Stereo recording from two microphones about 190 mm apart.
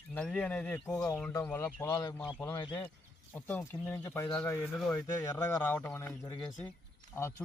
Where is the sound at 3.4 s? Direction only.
10° left (ahead or behind).